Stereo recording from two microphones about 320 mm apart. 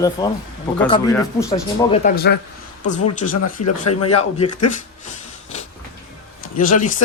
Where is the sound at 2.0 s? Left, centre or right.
Left.